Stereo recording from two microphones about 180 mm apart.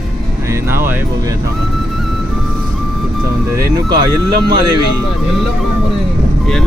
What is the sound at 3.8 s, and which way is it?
Speech, 25° right (ahead or behind).